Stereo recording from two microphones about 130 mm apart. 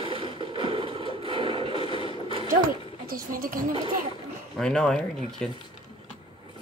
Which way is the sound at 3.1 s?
90° right.